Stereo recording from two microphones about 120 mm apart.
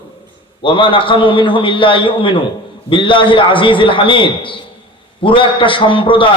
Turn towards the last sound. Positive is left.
turn(degrees=45)  # may be behind; listen again after turning